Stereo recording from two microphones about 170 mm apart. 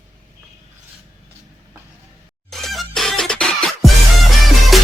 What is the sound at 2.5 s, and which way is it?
Music, centre (ahead or behind).